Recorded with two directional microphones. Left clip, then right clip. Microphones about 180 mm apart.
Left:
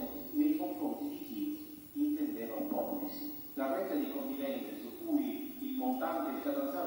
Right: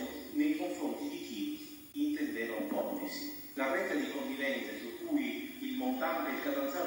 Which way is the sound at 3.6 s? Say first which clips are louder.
Right 2 dB; 40° right (ahead or behind).